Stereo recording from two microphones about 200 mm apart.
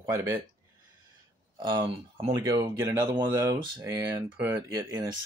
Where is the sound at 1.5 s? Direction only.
25° right (ahead or behind).